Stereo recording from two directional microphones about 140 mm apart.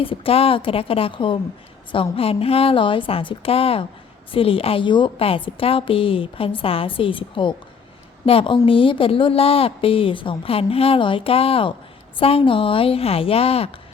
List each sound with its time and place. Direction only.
0.0 s a woman's voice: 40° left (ahead or behind)